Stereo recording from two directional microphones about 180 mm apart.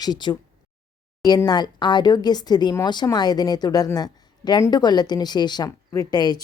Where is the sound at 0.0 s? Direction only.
25° left (ahead or behind).